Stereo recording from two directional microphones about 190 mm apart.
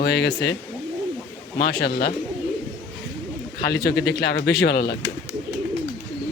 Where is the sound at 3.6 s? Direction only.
55° left (ahead or behind).